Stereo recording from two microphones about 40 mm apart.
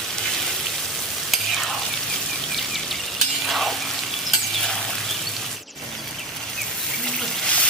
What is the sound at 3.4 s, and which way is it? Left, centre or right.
Frying, centre.